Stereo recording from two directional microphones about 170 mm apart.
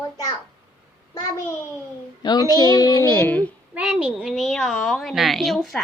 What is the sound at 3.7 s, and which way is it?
A woman's voice, 10° right (ahead or behind).